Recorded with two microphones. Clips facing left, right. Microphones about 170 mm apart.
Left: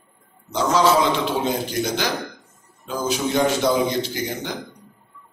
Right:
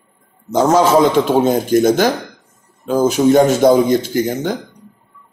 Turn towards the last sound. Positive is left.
turn(degrees=-45)  # may be behind; listen again after turning